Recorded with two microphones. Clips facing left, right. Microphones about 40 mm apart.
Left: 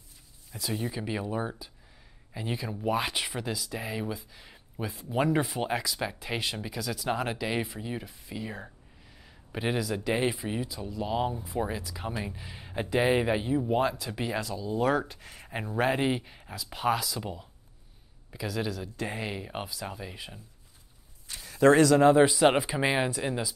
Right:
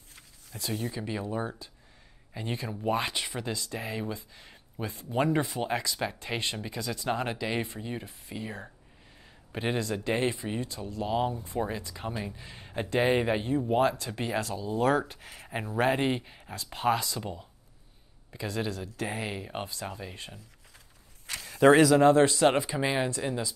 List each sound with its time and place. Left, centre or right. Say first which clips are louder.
0.7 s a man's voice: left 1 dB; centre
21.3 s a sound: right 6 dB; right
21.8 s speech: even; centre
22.1 s speech: left 1 dB; centre